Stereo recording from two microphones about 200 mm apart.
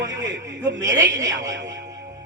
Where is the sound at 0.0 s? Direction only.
15° right (ahead or behind).